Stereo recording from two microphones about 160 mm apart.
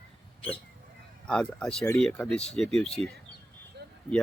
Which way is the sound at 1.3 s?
5° left (ahead or behind).